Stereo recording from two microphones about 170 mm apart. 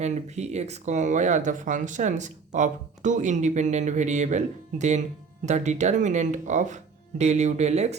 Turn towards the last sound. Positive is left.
turn(degrees=-40)  # may be behind; listen again after turning